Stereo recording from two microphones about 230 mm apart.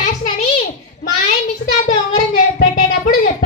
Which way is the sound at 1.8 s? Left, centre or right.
Left.